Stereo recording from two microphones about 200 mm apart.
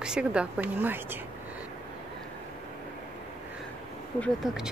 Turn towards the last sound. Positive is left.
turn(degrees=0)  # may be behind; listen again after turning